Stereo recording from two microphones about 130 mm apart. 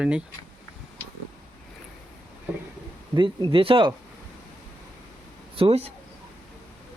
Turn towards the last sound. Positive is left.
turn(degrees=-50)  # may be behind; listen again after turning